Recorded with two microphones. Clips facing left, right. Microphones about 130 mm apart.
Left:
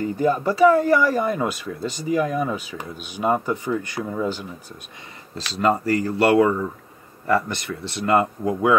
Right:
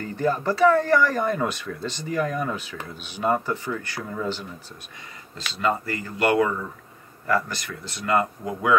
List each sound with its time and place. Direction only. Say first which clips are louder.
0.0 s speech: left 4 dB; 15° left (ahead or behind)
5.5 s speech: left 5 dB; 40° left (ahead or behind)